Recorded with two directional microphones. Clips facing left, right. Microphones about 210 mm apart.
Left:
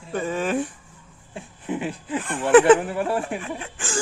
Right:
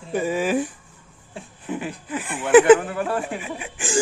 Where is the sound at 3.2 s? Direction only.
5° right (ahead or behind).